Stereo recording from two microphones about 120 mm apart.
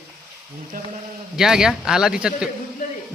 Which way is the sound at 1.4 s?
5° right (ahead or behind).